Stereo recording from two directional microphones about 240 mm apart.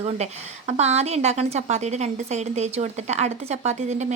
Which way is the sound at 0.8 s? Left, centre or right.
Right.